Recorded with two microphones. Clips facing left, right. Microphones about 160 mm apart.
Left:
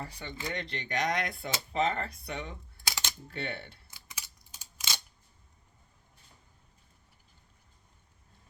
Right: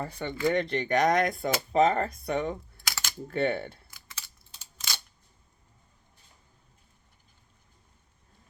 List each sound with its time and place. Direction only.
0.0 s speech: 50° right (ahead or behind)
2.8 s typing: 25° left (ahead or behind)
3.2 s speech: 50° right (ahead or behind)
3.8 s a sound: 15° left (ahead or behind)